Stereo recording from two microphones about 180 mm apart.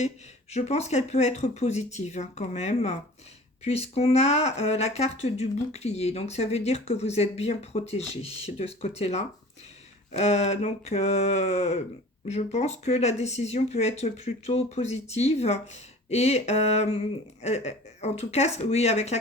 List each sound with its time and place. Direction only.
0.5 s speech: 35° left (ahead or behind)